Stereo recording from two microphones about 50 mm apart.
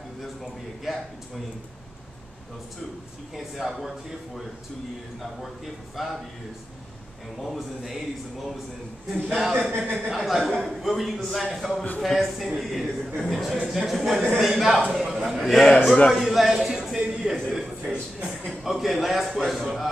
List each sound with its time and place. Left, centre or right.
0.2 s a sound: centre
3.3 s a man's voice: centre
6.0 s a man's voice: centre
7.4 s a man's voice: centre
9.1 s a man's voice: centre
15.5 s a man's voice: centre
16.1 s a man's voice: centre